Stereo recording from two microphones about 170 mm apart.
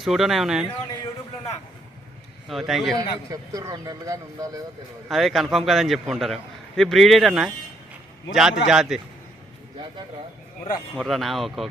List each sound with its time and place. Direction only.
0.0 s a man's voice: centre (ahead or behind)
2.5 s a man's voice: centre (ahead or behind)
3.2 s speech: 20° right (ahead or behind)
5.0 s a man's voice: centre (ahead or behind)
10.9 s a man's voice: centre (ahead or behind)